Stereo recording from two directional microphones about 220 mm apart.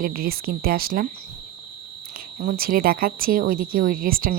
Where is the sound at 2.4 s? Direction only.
40° right (ahead or behind).